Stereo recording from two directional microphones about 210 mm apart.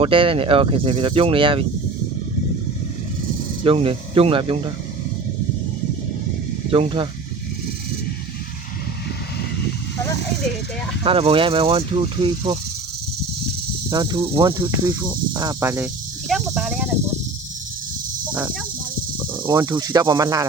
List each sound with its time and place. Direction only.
0.0 s speech: 25° right (ahead or behind)
3.6 s speech: 25° right (ahead or behind)
6.7 s speech: 25° right (ahead or behind)
11.0 s speech: 25° right (ahead or behind)
13.9 s speech: 20° right (ahead or behind); by 16.9 s 5° right (ahead or behind)
19.3 s speech: 20° right (ahead or behind)